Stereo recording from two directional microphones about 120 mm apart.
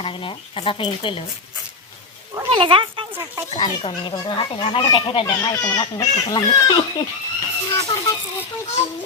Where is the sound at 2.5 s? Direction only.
45° right (ahead or behind).